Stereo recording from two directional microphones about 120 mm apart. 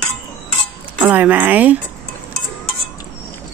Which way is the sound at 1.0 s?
15° right (ahead or behind).